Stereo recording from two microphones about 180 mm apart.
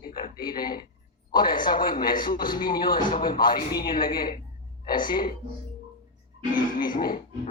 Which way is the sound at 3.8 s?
55° left (ahead or behind).